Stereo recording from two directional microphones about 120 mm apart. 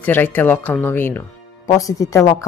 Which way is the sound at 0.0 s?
15° left (ahead or behind).